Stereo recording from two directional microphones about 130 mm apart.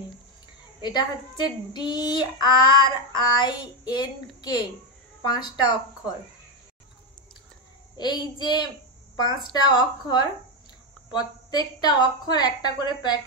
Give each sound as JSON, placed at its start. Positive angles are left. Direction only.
{"t": 0.8, "sound": "a woman's voice", "side_deg": 35}
{"t": 8.0, "sound": "a woman's voice", "side_deg": 35}